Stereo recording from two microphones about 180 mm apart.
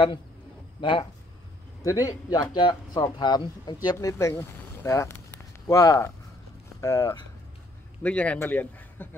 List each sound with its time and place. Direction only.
0.7 s speech: 25° left (ahead or behind)
8.0 s speech: 5° left (ahead or behind)